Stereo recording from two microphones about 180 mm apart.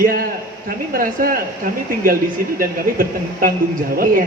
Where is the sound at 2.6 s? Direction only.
50° right (ahead or behind).